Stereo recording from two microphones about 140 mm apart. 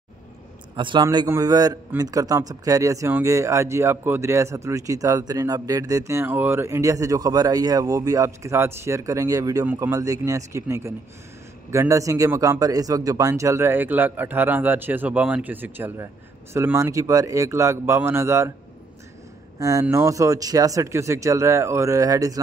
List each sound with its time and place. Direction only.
0.7 s speech: 35° right (ahead or behind)
1.0 s speech: 25° right (ahead or behind)
19.6 s speech: 20° right (ahead or behind)